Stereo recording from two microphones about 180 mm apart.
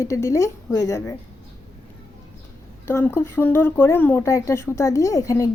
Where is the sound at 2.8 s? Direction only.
10° left (ahead or behind).